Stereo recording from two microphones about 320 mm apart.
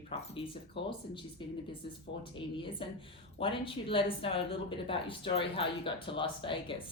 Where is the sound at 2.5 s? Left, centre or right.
Centre.